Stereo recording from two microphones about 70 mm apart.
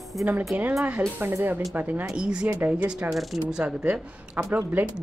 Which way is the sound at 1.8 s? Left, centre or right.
Right.